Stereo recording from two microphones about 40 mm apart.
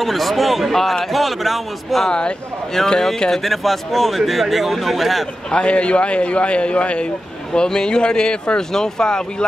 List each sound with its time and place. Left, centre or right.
0.0 s speech: centre
2.0 s a man's voice: left
2.8 s speech: centre
5.5 s a man's voice: left
8.5 s speech: centre